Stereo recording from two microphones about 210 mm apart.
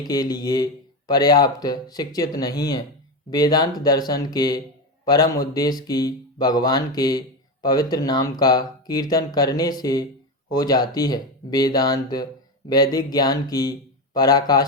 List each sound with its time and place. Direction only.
0.0 s speech: 20° left (ahead or behind)